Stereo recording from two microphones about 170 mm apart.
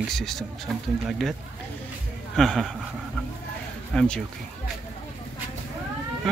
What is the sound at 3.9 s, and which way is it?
Speech, 5° left (ahead or behind).